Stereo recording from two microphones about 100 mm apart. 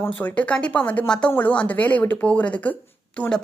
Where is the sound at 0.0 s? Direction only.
15° left (ahead or behind).